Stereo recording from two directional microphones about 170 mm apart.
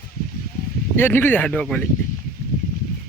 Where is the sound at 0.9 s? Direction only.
10° left (ahead or behind).